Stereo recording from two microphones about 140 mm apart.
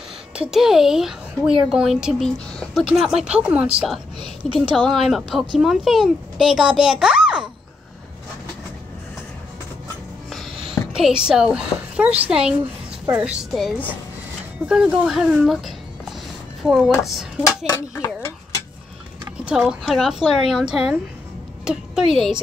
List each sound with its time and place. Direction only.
0.4 s speech: 5° right (ahead or behind)
10.7 s a woman's voice: 5° right (ahead or behind)
17.7 s speech: 20° left (ahead or behind)
19.4 s speech: 5° right (ahead or behind)